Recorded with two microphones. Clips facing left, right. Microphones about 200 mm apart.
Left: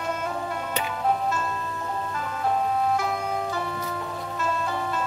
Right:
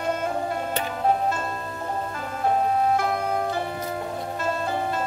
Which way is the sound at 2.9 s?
55° right (ahead or behind).